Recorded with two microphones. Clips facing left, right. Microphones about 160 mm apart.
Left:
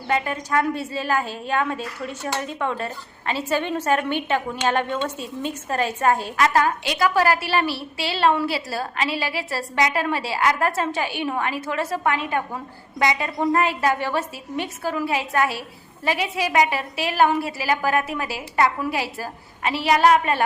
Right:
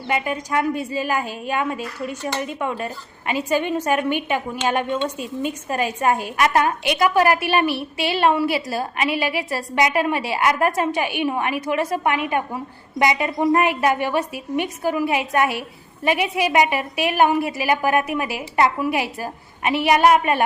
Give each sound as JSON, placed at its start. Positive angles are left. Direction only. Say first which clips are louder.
{"t": 0.1, "sound": "a woman's voice", "louder": "even", "side_deg": -10}